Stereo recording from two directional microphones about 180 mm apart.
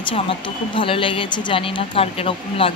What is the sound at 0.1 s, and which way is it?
Speech, 30° left (ahead or behind).